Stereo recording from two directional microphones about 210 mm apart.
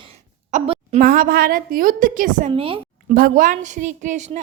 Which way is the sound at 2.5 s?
25° right (ahead or behind).